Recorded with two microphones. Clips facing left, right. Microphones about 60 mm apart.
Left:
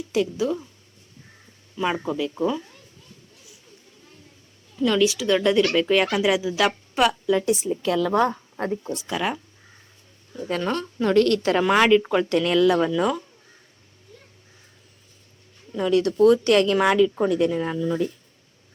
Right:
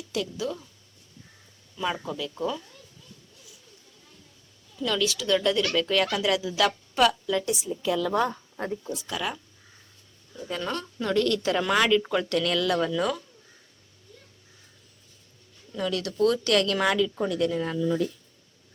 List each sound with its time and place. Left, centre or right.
0.1 s speech: left
1.7 s speech: left
4.8 s a woman's voice: centre
7.6 s a woman's voice: left
8.1 s a woman's voice: left
9.0 s speech: left
10.6 s a woman's voice: left
11.6 s speech: left
15.7 s speech: left